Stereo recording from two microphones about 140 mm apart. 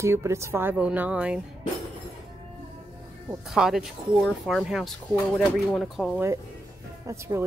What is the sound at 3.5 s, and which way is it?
Speech, centre (ahead or behind).